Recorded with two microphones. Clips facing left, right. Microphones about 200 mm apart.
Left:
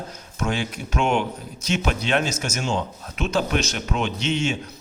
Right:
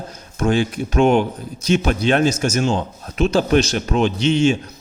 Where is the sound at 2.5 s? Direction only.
35° right (ahead or behind).